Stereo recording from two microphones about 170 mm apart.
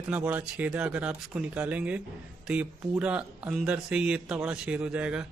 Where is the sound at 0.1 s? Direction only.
10° right (ahead or behind).